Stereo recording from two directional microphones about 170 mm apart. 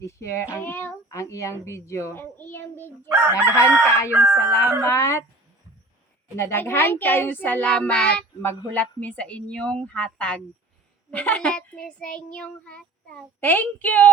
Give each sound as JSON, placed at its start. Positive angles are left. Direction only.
{"t": 0.0, "sound": "a child's voice", "side_deg": 15}
{"t": 3.1, "sound": "crowing", "side_deg": -10}
{"t": 4.8, "sound": "speech", "side_deg": 15}
{"t": 6.3, "sound": "speech", "side_deg": 15}